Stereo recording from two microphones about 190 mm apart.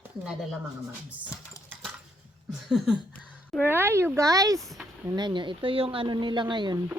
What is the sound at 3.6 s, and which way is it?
Speech, 10° right (ahead or behind).